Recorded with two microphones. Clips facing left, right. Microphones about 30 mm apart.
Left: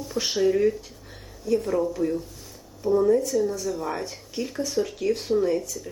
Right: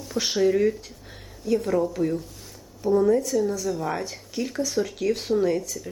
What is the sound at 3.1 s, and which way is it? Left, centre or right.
Speech, right.